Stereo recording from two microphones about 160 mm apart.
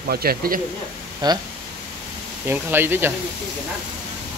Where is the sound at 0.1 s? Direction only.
70° right (ahead or behind).